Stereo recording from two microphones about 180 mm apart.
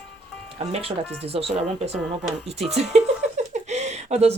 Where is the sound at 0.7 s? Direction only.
30° right (ahead or behind).